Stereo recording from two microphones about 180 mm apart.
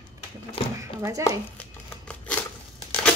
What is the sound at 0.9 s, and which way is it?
Speech, 20° right (ahead or behind).